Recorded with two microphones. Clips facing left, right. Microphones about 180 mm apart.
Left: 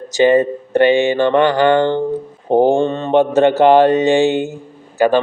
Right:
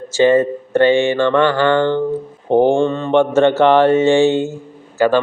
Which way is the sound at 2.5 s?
40° left (ahead or behind).